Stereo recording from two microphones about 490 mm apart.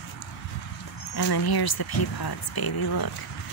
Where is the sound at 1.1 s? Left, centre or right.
Left.